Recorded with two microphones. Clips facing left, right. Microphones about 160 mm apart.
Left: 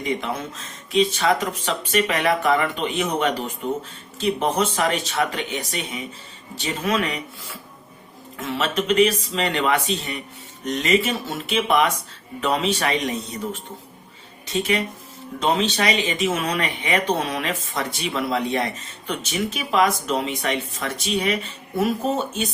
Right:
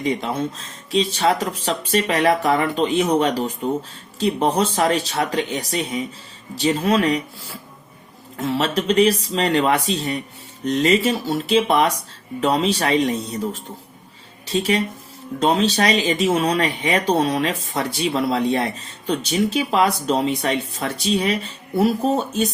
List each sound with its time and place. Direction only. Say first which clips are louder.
0.0 s speech: right 4 dB; 30° right (ahead or behind)